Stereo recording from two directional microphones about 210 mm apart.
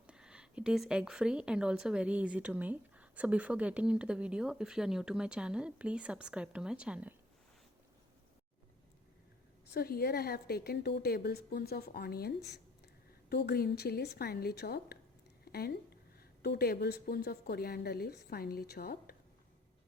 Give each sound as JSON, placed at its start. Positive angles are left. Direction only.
{"t": 0.1, "sound": "speech", "side_deg": -5}
{"t": 9.7, "sound": "a woman's voice", "side_deg": 45}
{"t": 13.3, "sound": "a woman's voice", "side_deg": 50}